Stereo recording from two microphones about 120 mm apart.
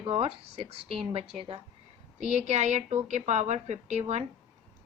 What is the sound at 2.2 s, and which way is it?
A woman's voice, 70° right (ahead or behind).